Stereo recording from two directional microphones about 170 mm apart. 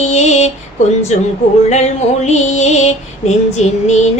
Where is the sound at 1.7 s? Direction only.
40° left (ahead or behind).